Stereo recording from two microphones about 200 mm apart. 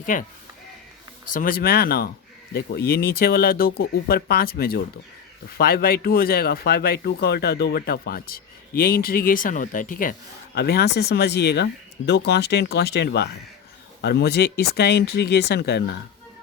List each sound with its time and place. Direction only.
0.0 s speech: 40° left (ahead or behind)
1.3 s speech: 45° left (ahead or behind)